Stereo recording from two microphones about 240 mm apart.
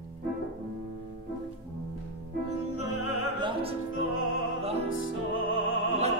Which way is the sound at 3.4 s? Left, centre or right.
Right.